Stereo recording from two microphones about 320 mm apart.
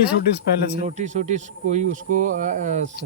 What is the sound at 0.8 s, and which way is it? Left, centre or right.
Speech, right.